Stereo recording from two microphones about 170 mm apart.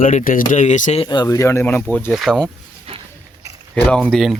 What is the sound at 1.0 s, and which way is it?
Speech, 25° left (ahead or behind).